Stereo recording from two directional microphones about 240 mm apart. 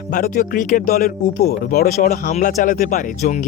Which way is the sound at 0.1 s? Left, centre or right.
Left.